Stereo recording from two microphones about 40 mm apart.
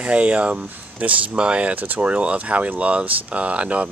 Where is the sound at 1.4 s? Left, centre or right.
Right.